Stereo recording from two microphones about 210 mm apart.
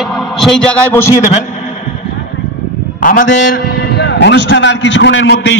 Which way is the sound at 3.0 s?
40° left (ahead or behind).